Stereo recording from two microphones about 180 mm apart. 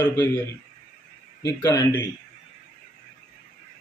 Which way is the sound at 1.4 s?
20° left (ahead or behind).